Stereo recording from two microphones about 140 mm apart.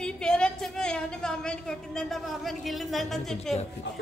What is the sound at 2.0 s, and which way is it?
Speech, centre (ahead or behind).